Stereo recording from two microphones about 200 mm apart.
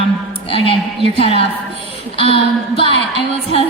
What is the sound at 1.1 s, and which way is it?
A woman's voice, 25° left (ahead or behind).